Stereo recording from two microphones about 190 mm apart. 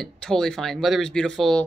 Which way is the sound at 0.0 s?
5° left (ahead or behind).